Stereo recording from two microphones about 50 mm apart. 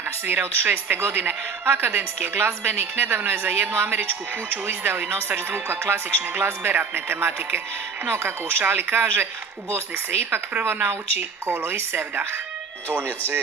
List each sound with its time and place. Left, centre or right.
0.3 s a woman's voice: right
10.6 s a woman's voice: right